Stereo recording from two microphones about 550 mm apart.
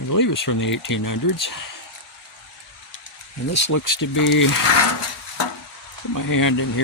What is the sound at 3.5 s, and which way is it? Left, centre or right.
Speech, left.